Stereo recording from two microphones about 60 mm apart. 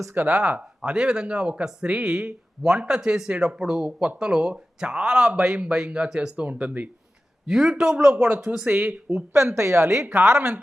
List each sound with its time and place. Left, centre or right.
0.3 s a man's voice: centre
7.4 s a man's voice: centre
8.1 s speech: right
9.1 s a woman's voice: right